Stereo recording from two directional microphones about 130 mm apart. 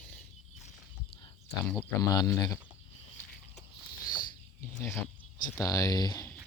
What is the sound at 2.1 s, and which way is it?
Speech, 25° left (ahead or behind).